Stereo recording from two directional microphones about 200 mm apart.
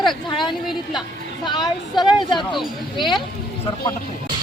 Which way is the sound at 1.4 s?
20° left (ahead or behind).